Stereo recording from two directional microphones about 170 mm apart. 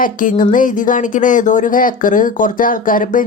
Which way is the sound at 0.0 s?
50° left (ahead or behind).